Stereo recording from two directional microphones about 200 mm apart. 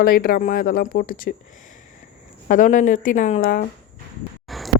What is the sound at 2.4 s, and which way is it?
Speech, 40° left (ahead or behind).